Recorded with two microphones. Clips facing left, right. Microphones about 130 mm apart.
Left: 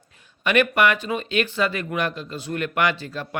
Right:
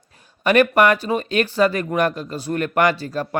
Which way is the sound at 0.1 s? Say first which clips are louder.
Right 4 dB; 40° right (ahead or behind).